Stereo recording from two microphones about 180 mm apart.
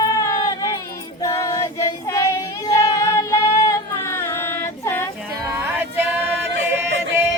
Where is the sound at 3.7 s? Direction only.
15° left (ahead or behind).